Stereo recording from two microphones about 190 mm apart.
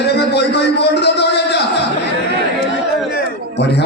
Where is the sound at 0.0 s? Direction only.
60° left (ahead or behind).